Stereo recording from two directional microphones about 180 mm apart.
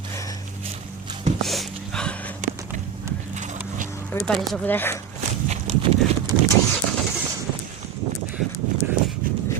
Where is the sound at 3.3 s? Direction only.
40° right (ahead or behind).